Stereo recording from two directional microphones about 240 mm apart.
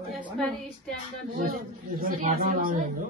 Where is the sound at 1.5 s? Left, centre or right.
Right.